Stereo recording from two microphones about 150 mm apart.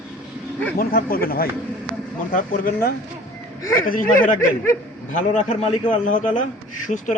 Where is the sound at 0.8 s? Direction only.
75° left (ahead or behind).